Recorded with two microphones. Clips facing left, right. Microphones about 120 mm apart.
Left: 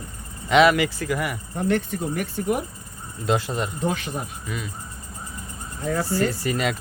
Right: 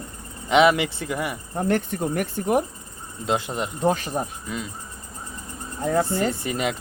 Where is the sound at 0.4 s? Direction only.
20° right (ahead or behind).